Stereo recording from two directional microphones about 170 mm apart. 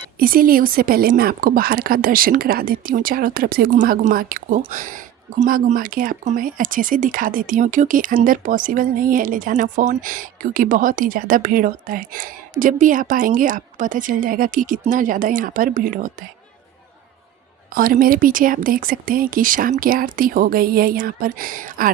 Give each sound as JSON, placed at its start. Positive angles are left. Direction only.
{"t": 0.2, "sound": "a woman's voice", "side_deg": -60}
{"t": 17.7, "sound": "a woman's voice", "side_deg": -55}